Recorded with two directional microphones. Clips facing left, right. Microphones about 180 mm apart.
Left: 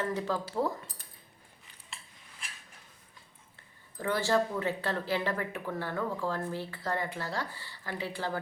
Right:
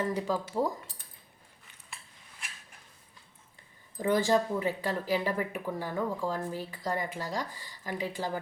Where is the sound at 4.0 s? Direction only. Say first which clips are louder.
Right 2 dB; 15° right (ahead or behind).